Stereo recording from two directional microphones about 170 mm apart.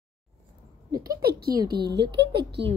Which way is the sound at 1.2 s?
65° right (ahead or behind).